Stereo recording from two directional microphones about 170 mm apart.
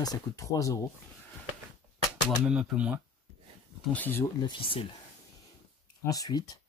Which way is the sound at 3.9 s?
10° left (ahead or behind).